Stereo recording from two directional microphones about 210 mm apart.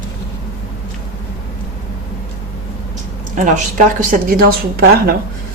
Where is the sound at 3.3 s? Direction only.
40° right (ahead or behind).